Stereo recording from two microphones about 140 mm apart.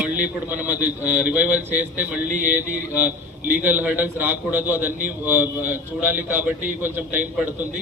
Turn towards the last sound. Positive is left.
turn(degrees=-10)  # may be behind; listen again after turning